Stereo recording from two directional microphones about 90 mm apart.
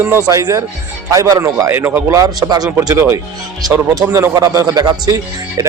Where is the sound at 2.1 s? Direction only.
40° right (ahead or behind).